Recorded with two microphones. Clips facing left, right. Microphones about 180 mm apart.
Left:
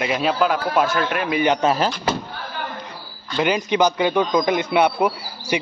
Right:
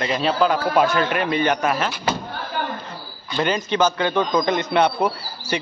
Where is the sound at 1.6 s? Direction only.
35° left (ahead or behind).